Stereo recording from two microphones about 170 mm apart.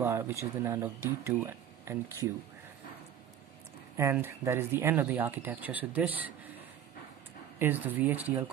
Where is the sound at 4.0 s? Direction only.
15° right (ahead or behind).